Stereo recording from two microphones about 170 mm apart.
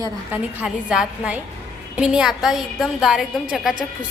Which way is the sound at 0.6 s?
5° right (ahead or behind).